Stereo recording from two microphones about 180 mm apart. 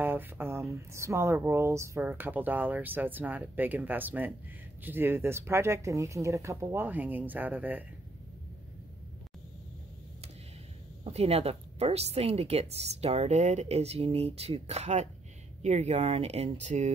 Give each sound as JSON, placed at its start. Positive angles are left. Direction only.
{"t": 0.0, "sound": "speech", "side_deg": -10}
{"t": 11.1, "sound": "speech", "side_deg": -35}